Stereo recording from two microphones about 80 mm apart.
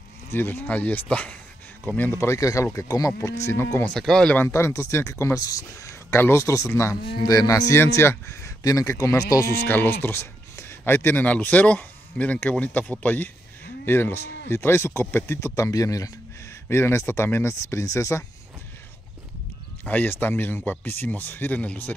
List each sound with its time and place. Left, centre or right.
0.3 s speech: left
2.0 s speech: left
3.9 s speech: centre
4.5 s speech: left
7.2 s moo: left
7.8 s speech: left
9.7 s speech: left
16.6 s speech: left
19.8 s speech: left